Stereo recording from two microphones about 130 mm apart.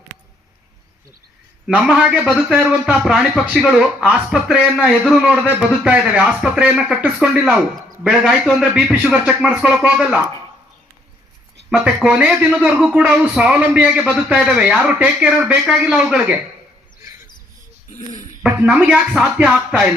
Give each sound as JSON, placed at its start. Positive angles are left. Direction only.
{"t": 1.6, "sound": "a man's voice", "side_deg": -5}
{"t": 12.0, "sound": "a man's voice", "side_deg": -10}
{"t": 17.9, "sound": "a sound", "side_deg": 70}
{"t": 18.4, "sound": "a man's voice", "side_deg": -5}